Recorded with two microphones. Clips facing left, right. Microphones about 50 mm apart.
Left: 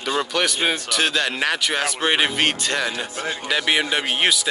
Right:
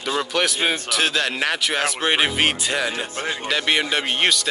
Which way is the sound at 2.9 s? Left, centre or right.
Right.